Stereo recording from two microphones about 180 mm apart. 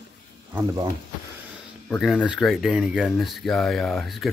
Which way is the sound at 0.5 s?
15° right (ahead or behind).